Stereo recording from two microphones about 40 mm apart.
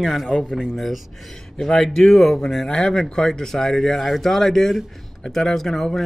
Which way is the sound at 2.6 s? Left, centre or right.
Centre.